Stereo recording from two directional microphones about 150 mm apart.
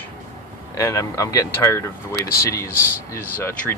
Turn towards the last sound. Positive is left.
turn(degrees=20)  # may be behind; listen again after turning